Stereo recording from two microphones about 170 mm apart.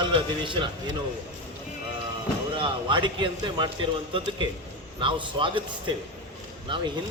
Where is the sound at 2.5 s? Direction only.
30° right (ahead or behind).